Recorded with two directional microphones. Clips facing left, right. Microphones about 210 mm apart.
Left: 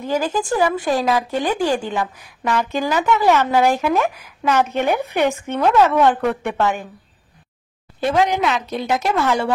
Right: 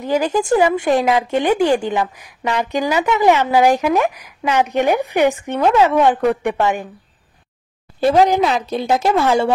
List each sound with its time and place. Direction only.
0.0 s a woman's voice: 20° right (ahead or behind)
8.0 s speech: 35° right (ahead or behind)